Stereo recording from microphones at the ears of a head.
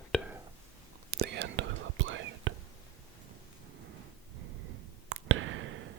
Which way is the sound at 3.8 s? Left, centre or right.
Right.